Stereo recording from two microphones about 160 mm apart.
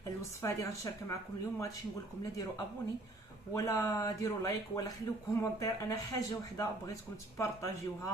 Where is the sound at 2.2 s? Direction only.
20° left (ahead or behind).